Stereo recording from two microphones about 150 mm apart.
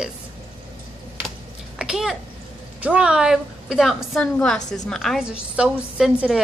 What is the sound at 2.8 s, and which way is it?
A woman's voice, 5° right (ahead or behind).